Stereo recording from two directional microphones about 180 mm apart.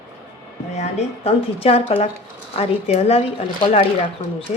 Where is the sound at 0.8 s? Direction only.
35° left (ahead or behind).